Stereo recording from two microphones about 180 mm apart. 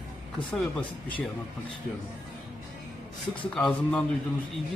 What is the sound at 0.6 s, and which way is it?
Speech, 5° left (ahead or behind).